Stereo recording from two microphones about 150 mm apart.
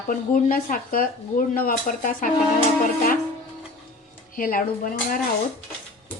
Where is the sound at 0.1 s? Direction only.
65° left (ahead or behind).